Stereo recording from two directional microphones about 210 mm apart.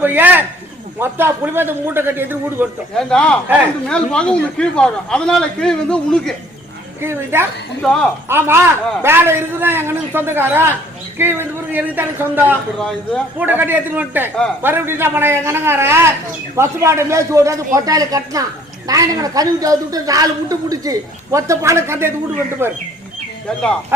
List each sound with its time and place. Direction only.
0.0 s a man's voice: 10° right (ahead or behind)
2.9 s a man's voice: 5° left (ahead or behind)
7.0 s a woman's voice: 10° right (ahead or behind)
7.8 s a man's voice: 5° left (ahead or behind)
8.3 s a woman's voice: 10° right (ahead or behind)